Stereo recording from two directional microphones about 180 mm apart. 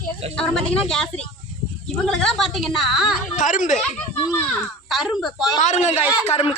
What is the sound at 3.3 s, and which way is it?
Speech, 45° left (ahead or behind).